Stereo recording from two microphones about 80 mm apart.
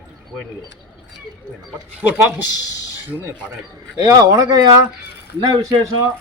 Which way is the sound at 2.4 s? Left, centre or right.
Left.